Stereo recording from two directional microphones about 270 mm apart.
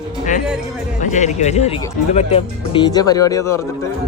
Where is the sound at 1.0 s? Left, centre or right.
Left.